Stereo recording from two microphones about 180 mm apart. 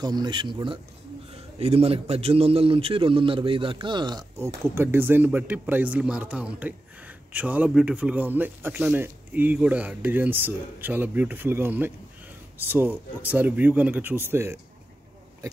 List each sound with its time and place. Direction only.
0.0 s a man's voice: 25° right (ahead or behind)
4.7 s speech: 10° right (ahead or behind)